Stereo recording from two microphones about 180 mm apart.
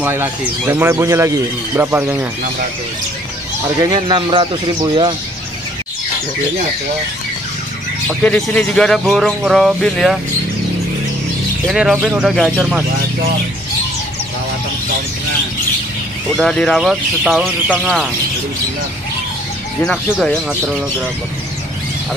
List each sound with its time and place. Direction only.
0.0 s speech: 10° right (ahead or behind)
3.6 s a man's voice: 20° right (ahead or behind)
8.2 s a man's voice: 5° left (ahead or behind)
11.6 s a man's voice: 5° right (ahead or behind)
16.3 s a man's voice: centre (ahead or behind)
19.8 s a man's voice: 5° left (ahead or behind)